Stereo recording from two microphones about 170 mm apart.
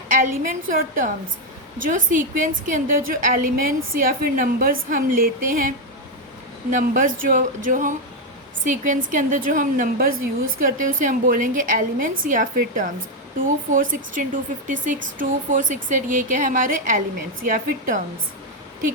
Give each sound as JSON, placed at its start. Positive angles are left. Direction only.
{"t": 0.1, "sound": "a woman's voice", "side_deg": -55}